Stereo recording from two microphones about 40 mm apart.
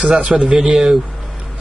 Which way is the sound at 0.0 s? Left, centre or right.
Right.